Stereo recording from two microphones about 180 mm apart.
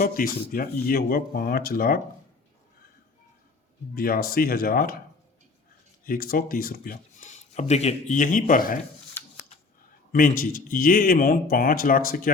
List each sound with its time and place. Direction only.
0.0 s speech: 55° left (ahead or behind)
3.9 s speech: 55° left (ahead or behind)
6.1 s speech: 50° left (ahead or behind)
9.2 s a sound: 10° left (ahead or behind)
10.1 s speech: 50° left (ahead or behind)